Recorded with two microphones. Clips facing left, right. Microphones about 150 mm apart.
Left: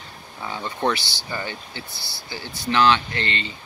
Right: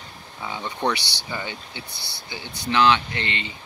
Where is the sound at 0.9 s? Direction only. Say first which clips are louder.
Left 1 dB; 20° right (ahead or behind).